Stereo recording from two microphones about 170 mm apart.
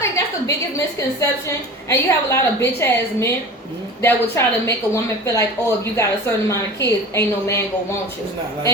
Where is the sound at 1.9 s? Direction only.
15° left (ahead or behind).